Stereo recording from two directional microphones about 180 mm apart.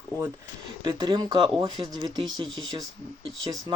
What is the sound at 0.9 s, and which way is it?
Speech, 25° right (ahead or behind).